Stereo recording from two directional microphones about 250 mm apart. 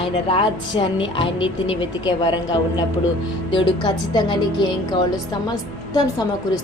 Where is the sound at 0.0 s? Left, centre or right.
Left.